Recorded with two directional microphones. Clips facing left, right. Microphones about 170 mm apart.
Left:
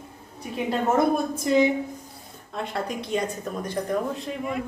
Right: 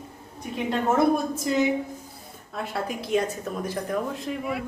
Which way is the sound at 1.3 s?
Centre (ahead or behind).